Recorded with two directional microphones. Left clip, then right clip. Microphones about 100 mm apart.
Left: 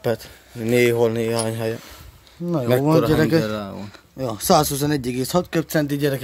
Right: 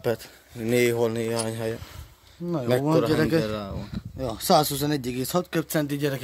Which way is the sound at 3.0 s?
15° left (ahead or behind).